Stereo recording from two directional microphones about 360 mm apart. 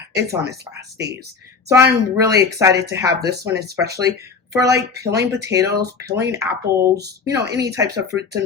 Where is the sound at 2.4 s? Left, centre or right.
Centre.